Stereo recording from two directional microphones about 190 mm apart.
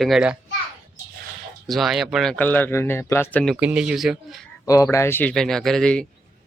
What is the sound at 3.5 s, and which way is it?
Speech, 5° right (ahead or behind).